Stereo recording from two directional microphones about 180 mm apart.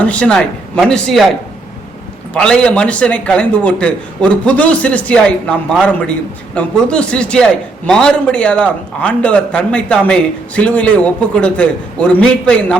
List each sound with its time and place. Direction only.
0.0 s a man's voice: 5° left (ahead or behind)
2.3 s a man's voice: 5° left (ahead or behind)